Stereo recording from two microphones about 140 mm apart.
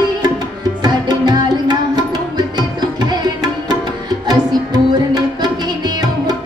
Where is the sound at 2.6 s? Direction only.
30° right (ahead or behind).